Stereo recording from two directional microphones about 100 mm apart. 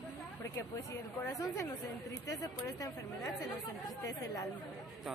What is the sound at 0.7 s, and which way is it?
Speech, 35° left (ahead or behind).